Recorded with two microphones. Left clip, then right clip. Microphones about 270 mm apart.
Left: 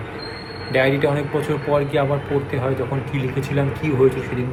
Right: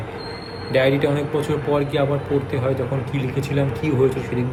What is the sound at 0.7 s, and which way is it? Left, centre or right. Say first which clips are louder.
A man's voice: even; centre.